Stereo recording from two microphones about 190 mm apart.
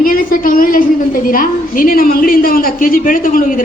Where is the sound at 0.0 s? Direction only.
50° left (ahead or behind).